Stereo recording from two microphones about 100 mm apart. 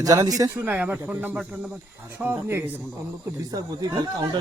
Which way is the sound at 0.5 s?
15° right (ahead or behind).